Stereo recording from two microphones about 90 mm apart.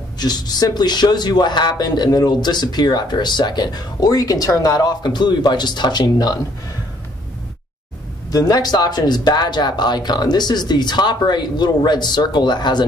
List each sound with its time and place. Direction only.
0.2 s speech: 50° left (ahead or behind)
8.3 s speech: 45° left (ahead or behind)